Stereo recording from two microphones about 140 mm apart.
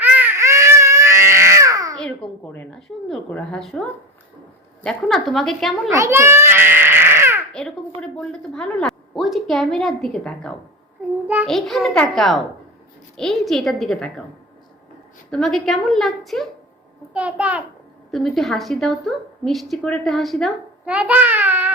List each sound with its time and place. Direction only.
0.0 s baby cry: 10° right (ahead or behind)
2.0 s a woman's voice: 5° left (ahead or behind)
5.9 s a child's voice: 20° right (ahead or behind)
8.1 s a woman's voice: 5° left (ahead or behind)
15.3 s a woman's voice: 5° left (ahead or behind)
17.2 s a child's voice: 10° right (ahead or behind)
18.1 s a woman's voice: centre (ahead or behind)
20.8 s speech: 10° right (ahead or behind)